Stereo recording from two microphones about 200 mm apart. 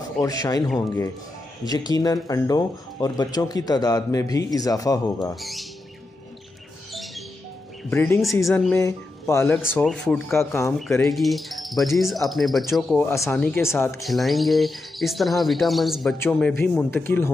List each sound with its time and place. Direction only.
0.2 s speech: 20° left (ahead or behind)
5.3 s speech: centre (ahead or behind)
6.9 s a sound: centre (ahead or behind)
7.9 s speech: 10° left (ahead or behind)
14.0 s speech: centre (ahead or behind)